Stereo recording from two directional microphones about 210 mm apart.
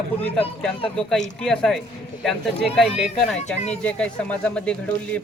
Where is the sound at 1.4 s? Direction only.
Centre (ahead or behind).